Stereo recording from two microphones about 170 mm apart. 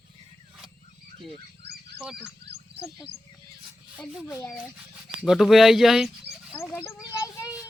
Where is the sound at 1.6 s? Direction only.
75° right (ahead or behind).